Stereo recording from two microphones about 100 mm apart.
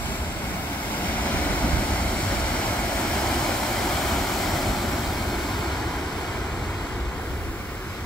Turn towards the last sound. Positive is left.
turn(degrees=15)  # may be behind; listen again after turning